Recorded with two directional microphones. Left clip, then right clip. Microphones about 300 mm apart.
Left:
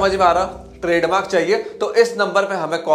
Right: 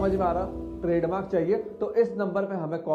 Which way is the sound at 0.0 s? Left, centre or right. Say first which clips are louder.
Left 11 dB; centre.